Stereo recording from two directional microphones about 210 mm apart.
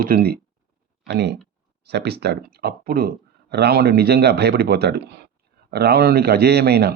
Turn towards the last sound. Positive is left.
turn(degrees=-50)  # may be behind; listen again after turning